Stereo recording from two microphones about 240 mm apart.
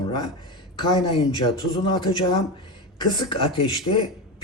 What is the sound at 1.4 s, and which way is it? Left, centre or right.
Speech, centre.